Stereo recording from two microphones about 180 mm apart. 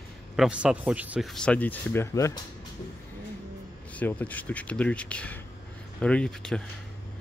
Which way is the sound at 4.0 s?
10° left (ahead or behind).